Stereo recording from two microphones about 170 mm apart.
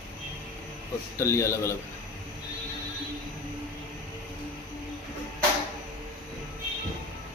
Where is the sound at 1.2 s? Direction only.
15° left (ahead or behind).